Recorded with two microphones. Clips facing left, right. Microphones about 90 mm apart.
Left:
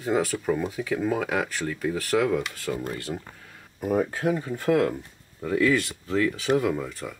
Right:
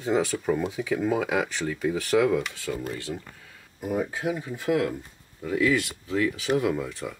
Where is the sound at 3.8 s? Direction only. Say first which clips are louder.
Left 3 dB; 45° left (ahead or behind).